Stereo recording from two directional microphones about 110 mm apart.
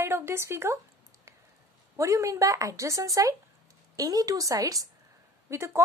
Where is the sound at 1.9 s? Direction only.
30° right (ahead or behind).